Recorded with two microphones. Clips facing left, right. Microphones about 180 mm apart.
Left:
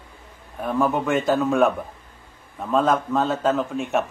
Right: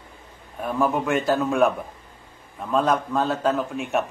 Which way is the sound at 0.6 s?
Centre (ahead or behind).